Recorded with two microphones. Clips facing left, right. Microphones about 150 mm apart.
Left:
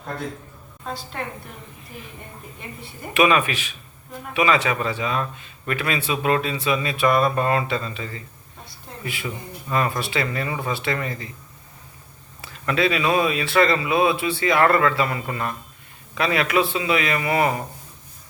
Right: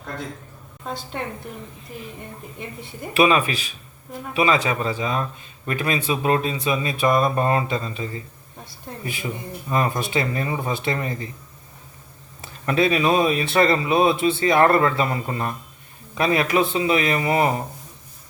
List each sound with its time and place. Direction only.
3.2 s speech: 35° right (ahead or behind)
9.2 s speech: 25° right (ahead or behind)
12.6 s speech: 25° right (ahead or behind)